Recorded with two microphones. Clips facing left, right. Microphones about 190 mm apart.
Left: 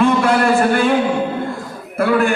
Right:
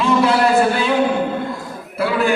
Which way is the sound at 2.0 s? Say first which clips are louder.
Left 4 dB; 50° left (ahead or behind).